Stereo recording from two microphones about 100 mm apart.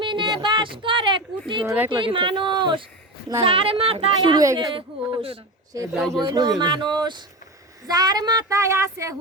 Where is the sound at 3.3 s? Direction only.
70° right (ahead or behind).